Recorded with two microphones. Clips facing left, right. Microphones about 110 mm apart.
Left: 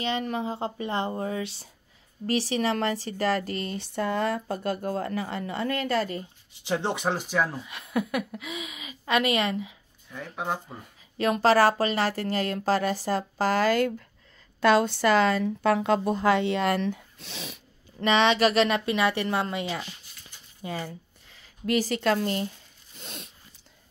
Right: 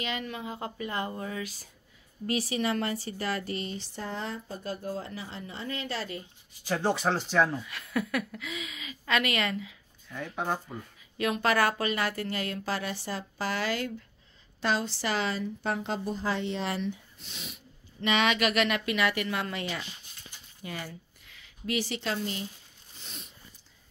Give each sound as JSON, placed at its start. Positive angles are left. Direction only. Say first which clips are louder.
{"t": 0.0, "sound": "a woman's voice", "louder": "left 6 dB", "side_deg": 35}
{"t": 2.2, "sound": "speech", "louder": "left 4 dB", "side_deg": 35}
{"t": 6.6, "sound": "speech", "louder": "even", "side_deg": 20}
{"t": 7.6, "sound": "a woman's voice", "louder": "left 3 dB", "side_deg": 20}
{"t": 10.3, "sound": "speech", "louder": "left 1 dB", "side_deg": 5}
{"t": 11.1, "sound": "speech", "louder": "left 6 dB", "side_deg": 35}
{"t": 15.4, "sound": "speech", "louder": "left 8 dB", "side_deg": 70}
{"t": 18.0, "sound": "a woman's voice", "louder": "left 5 dB", "side_deg": 30}
{"t": 20.6, "sound": "a sound", "louder": "left 5 dB", "side_deg": 25}
{"t": 21.6, "sound": "a woman's voice", "louder": "left 7 dB", "side_deg": 45}
{"t": 22.9, "sound": "a sound", "louder": "left 6 dB", "side_deg": 65}